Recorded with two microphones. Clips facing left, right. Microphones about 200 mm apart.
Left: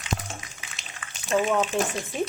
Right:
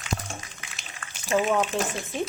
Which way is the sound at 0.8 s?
Centre (ahead or behind).